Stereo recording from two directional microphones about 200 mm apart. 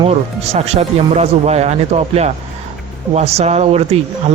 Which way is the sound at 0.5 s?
30° right (ahead or behind).